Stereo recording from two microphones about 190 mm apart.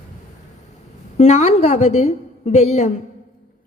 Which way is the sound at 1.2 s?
35° left (ahead or behind).